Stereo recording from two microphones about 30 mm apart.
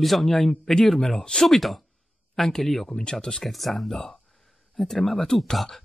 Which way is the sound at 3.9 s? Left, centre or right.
Centre.